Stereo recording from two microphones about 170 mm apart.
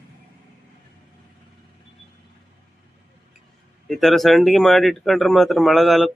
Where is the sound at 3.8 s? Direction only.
Centre (ahead or behind).